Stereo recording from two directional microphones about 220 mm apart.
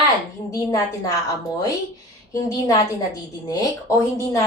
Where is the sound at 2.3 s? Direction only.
15° left (ahead or behind).